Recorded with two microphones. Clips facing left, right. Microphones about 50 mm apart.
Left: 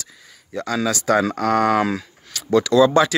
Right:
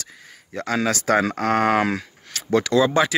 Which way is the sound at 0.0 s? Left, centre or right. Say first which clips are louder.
Right 1 dB; right.